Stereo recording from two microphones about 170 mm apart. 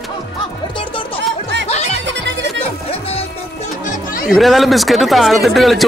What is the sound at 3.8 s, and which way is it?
Music, 55° left (ahead or behind).